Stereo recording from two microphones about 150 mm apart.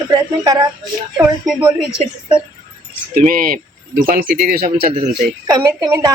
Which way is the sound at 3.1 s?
70° right (ahead or behind).